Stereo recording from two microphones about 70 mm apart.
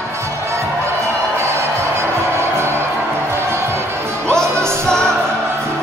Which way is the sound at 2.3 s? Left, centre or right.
Right.